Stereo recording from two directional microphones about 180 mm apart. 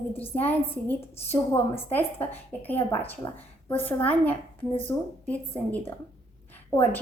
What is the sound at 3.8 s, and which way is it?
A woman's voice, 10° left (ahead or behind).